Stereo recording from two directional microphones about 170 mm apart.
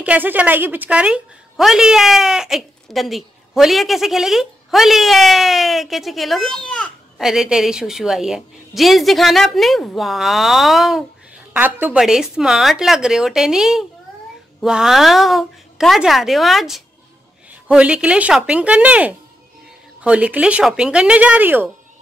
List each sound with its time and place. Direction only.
0.0 s a woman's voice: 10° right (ahead or behind)